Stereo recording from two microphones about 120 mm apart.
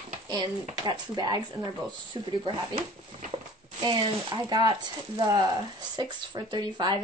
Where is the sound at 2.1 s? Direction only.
45° right (ahead or behind).